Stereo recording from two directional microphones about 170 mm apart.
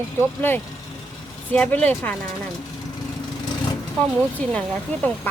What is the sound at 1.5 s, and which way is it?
Speech, 10° left (ahead or behind).